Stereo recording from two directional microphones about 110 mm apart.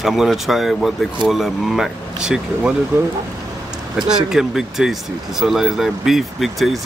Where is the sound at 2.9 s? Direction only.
20° right (ahead or behind).